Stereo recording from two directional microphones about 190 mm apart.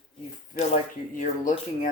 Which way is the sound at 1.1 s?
45° left (ahead or behind).